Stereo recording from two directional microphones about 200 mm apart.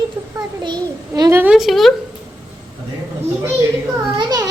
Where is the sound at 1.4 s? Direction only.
5° right (ahead or behind).